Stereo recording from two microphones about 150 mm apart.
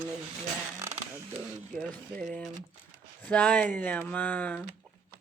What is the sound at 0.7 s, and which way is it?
Speech, 20° right (ahead or behind).